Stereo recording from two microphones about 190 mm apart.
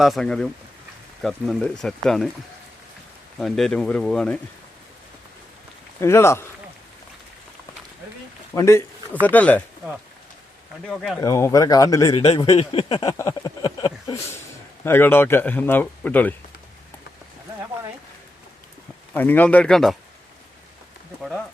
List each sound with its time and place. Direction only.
0.0 s speech: centre (ahead or behind)
3.3 s speech: centre (ahead or behind)
6.0 s speech: 15° left (ahead or behind)
8.5 s speech: 15° left (ahead or behind)
10.8 s speech: centre (ahead or behind)
11.2 s speech: 15° left (ahead or behind)
12.1 s a man's voice: 35° left (ahead or behind)
13.1 s speech: 15° left (ahead or behind)
14.8 s speech: 10° left (ahead or behind)
19.1 s speech: 10° left (ahead or behind)